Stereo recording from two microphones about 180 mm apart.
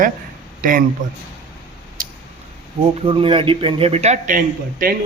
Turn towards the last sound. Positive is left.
turn(degrees=-50)  # may be behind; listen again after turning